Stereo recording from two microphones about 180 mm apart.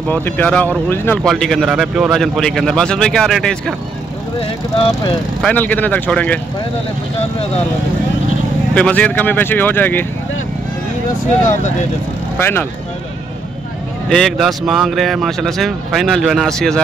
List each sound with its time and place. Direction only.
0.1 s speech: 10° left (ahead or behind)
4.4 s speech: 30° left (ahead or behind)
5.4 s speech: 10° left (ahead or behind)
8.7 s speech: 5° left (ahead or behind)
12.4 s speech: 10° left (ahead or behind)
14.0 s speech: centre (ahead or behind)